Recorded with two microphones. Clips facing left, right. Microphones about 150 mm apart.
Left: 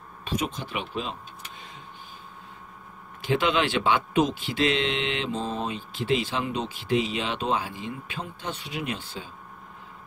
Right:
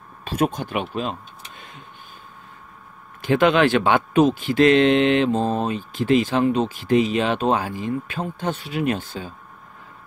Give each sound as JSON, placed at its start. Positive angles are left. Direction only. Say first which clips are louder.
{"t": 0.4, "sound": "speech", "louder": "right 11 dB", "side_deg": -50}
{"t": 3.2, "sound": "speech", "louder": "right 7 dB", "side_deg": -50}